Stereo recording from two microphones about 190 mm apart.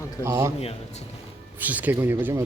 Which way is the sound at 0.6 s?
30° left (ahead or behind).